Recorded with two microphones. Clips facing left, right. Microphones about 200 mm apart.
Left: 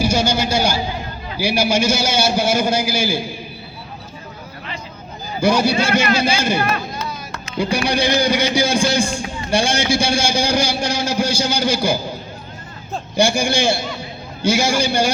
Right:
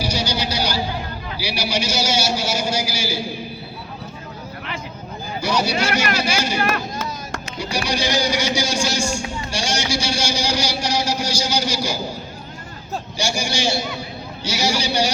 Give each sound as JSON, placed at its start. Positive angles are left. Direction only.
{"t": 0.0, "sound": "a sound", "side_deg": 50}
{"t": 1.4, "sound": "a man's voice", "side_deg": 50}
{"t": 5.4, "sound": "a man's voice", "side_deg": 50}
{"t": 6.7, "sound": "a sound", "side_deg": -45}
{"t": 7.6, "sound": "a man's voice", "side_deg": 55}
{"t": 13.1, "sound": "a man's voice", "side_deg": 55}